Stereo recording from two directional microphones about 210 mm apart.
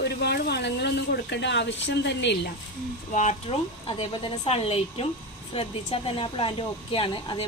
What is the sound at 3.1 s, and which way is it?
Speech, 35° left (ahead or behind).